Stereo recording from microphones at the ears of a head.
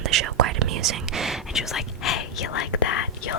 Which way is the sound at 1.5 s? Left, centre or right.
Left.